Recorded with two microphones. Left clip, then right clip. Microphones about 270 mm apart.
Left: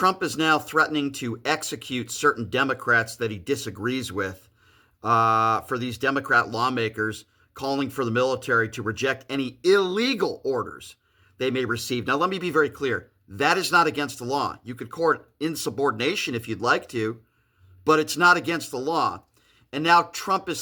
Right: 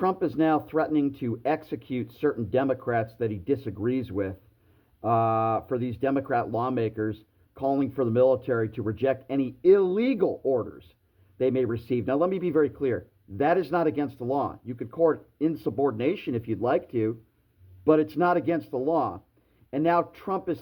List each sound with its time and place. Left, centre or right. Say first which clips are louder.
0.2 s speech: left 2 dB; centre